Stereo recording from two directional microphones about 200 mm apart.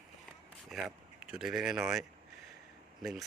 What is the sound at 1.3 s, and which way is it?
Speech, centre (ahead or behind).